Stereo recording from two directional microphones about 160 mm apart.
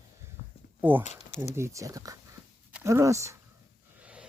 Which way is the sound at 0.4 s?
60° left (ahead or behind).